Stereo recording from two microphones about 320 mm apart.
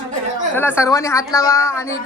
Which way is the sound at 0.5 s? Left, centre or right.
Centre.